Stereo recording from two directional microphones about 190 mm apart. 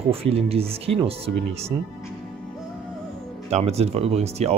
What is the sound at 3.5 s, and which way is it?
Speech, 35° right (ahead or behind).